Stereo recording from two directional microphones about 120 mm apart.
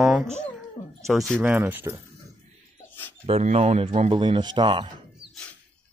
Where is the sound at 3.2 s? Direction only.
60° right (ahead or behind); by 4.9 s 45° right (ahead or behind).